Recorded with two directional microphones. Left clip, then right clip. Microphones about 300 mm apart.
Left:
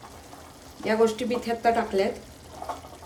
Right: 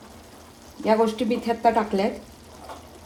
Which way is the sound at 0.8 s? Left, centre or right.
Centre.